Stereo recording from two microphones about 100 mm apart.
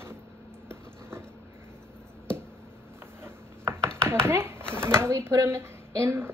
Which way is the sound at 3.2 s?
25° right (ahead or behind).